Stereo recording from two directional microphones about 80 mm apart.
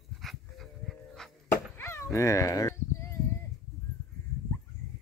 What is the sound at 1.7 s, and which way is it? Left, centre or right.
Dog, left.